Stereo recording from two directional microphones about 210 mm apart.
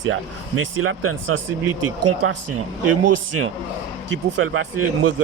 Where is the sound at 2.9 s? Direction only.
90° right.